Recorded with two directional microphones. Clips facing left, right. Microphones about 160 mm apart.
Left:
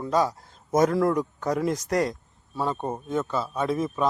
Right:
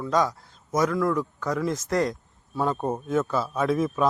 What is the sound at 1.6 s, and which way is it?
Speech, 15° left (ahead or behind).